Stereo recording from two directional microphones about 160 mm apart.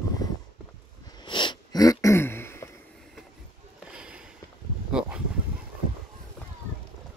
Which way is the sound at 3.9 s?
5° right (ahead or behind).